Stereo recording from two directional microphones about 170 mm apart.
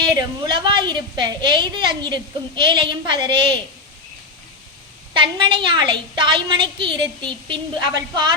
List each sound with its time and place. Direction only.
0.0 s a woman's voice: 25° right (ahead or behind)
5.1 s a woman's voice: 30° right (ahead or behind)